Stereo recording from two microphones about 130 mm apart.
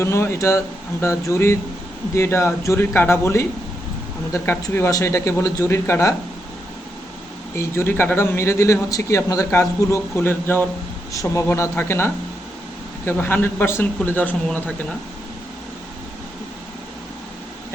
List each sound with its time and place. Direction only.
0.0 s a man's voice: 20° left (ahead or behind)
7.5 s a man's voice: 20° left (ahead or behind)